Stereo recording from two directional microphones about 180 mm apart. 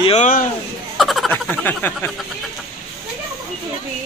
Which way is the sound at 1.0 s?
Centre (ahead or behind).